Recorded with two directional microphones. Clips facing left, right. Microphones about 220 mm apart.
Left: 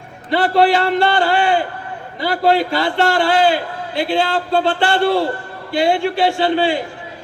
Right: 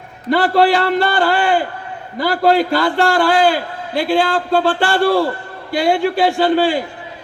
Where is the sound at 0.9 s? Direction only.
45° right (ahead or behind).